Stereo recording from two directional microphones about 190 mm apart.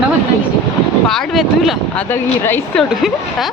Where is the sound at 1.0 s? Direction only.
Centre (ahead or behind).